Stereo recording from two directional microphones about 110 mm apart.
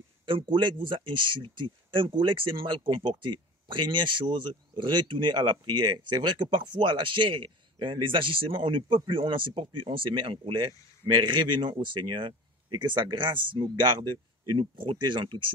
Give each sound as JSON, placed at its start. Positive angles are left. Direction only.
{"t": 0.3, "sound": "speech", "side_deg": -50}